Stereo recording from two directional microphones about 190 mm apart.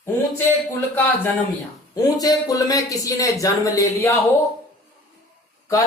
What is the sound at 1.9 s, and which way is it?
Speech, 20° left (ahead or behind).